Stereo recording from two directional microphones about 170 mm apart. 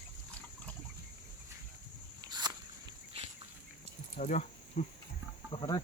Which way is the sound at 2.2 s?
25° right (ahead or behind).